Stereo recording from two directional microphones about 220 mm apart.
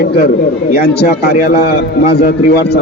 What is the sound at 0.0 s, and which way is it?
A man's voice, 45° left (ahead or behind).